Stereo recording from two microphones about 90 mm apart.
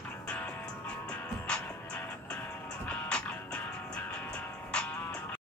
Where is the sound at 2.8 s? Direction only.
10° left (ahead or behind).